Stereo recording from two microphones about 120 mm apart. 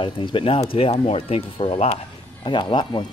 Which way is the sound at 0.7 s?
55° left (ahead or behind).